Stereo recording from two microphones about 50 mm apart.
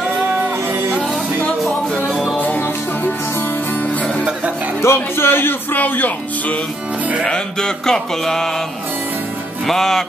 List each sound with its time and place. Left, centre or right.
3.3 s music: left
4.8 s speech: left
7.2 s music: centre
9.7 s music: centre